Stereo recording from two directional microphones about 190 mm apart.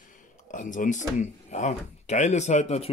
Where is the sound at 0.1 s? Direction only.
40° left (ahead or behind).